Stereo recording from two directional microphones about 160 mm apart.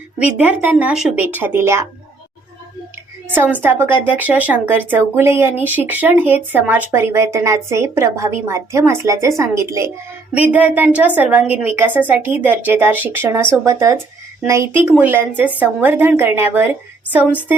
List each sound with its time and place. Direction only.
0.3 s a woman's voice: 10° right (ahead or behind)
3.3 s a woman's voice: 10° right (ahead or behind)